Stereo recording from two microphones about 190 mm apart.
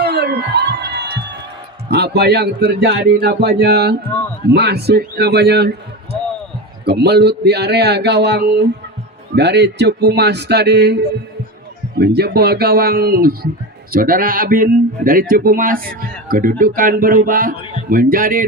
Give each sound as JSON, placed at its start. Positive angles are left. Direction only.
{"t": 0.0, "sound": "music", "side_deg": -60}
{"t": 1.9, "sound": "speech", "side_deg": -60}